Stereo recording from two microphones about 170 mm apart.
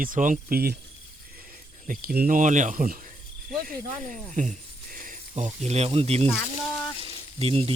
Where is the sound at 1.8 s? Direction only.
60° right (ahead or behind); by 6.3 s 40° right (ahead or behind).